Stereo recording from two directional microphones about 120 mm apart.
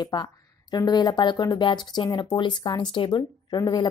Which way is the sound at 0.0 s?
35° left (ahead or behind).